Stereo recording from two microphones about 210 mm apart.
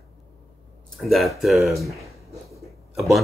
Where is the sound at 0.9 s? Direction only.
Centre (ahead or behind).